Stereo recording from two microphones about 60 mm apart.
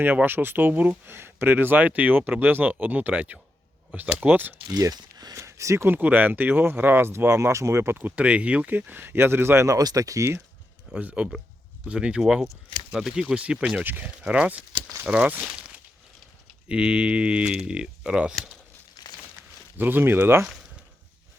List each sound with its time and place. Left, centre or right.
0.0 s speech: right
1.0 s speech: right
4.7 s a sound: right
5.4 s speech: right
5.9 s speech: right
9.6 s speech: right
10.9 s speech: centre
13.8 s speech: right
14.2 s speech: centre
19.0 s a sound: left
19.7 s speech: right